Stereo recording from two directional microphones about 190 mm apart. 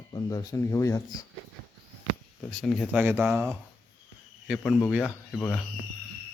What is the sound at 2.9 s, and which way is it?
Speech, 10° right (ahead or behind).